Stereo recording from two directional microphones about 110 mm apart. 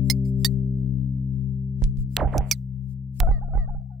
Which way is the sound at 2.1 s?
Centre (ahead or behind).